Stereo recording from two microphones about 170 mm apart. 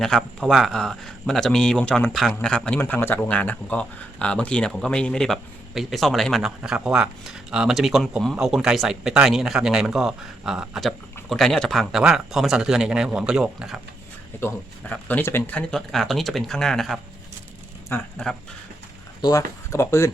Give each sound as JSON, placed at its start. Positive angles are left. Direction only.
{"t": 0.0, "sound": "speech", "side_deg": 0}
{"t": 14.4, "sound": "speech", "side_deg": 10}
{"t": 17.9, "sound": "speech", "side_deg": 15}
{"t": 19.2, "sound": "speech", "side_deg": 20}